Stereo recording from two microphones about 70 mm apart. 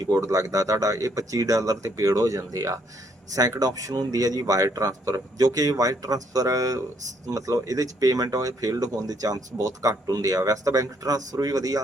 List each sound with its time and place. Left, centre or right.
0.1 s speech: right